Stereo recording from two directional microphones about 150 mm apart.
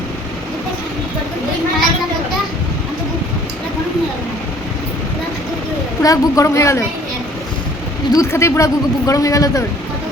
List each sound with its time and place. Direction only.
6.0 s speech: 20° left (ahead or behind)
8.1 s speech: 20° left (ahead or behind)